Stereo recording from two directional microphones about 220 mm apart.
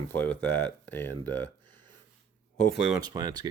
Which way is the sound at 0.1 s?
10° left (ahead or behind).